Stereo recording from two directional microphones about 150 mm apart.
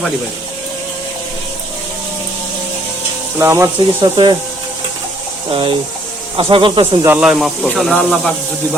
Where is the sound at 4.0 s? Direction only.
30° right (ahead or behind).